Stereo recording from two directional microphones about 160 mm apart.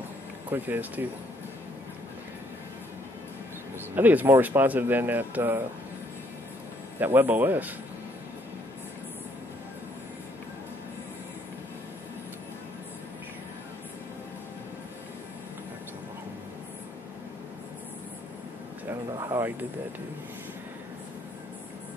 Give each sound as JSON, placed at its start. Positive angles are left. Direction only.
{"t": 0.5, "sound": "speech", "side_deg": -10}
{"t": 3.9, "sound": "speech", "side_deg": -10}
{"t": 7.0, "sound": "speech", "side_deg": -10}
{"t": 18.9, "sound": "a sound", "side_deg": -20}